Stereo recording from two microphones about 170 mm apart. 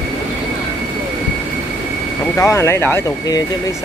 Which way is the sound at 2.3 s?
15° left (ahead or behind).